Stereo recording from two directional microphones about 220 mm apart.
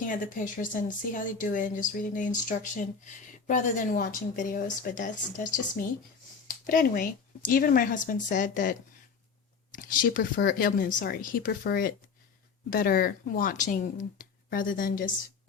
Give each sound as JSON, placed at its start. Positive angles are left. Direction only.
{"t": 0.0, "sound": "speech", "side_deg": 35}
{"t": 9.7, "sound": "speech", "side_deg": 40}